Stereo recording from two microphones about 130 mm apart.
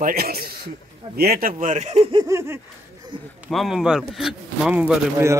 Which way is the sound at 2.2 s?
20° right (ahead or behind).